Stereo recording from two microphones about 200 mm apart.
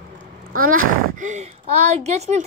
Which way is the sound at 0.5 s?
45° right (ahead or behind).